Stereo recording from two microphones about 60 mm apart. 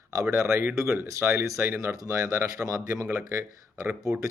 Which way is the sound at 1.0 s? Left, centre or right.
Right.